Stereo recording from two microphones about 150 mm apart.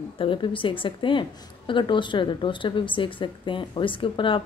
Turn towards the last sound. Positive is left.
turn(degrees=35)  # may be behind; listen again after turning